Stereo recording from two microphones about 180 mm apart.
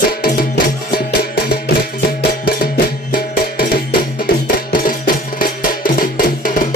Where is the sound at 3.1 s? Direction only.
55° left (ahead or behind).